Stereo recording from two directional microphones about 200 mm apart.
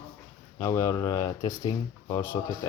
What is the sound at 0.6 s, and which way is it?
Speech, 15° left (ahead or behind).